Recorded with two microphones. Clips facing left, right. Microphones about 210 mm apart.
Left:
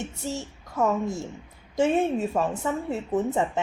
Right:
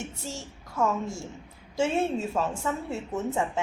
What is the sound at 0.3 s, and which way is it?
A child's voice, 20° left (ahead or behind).